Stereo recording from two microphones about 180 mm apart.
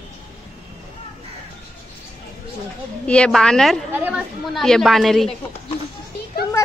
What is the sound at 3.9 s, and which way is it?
Speech, 10° right (ahead or behind).